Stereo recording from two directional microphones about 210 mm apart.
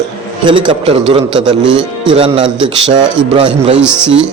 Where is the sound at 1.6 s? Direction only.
5° right (ahead or behind).